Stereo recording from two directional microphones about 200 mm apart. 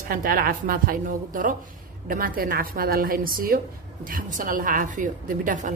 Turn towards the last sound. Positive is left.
turn(degrees=-40)  # may be behind; listen again after turning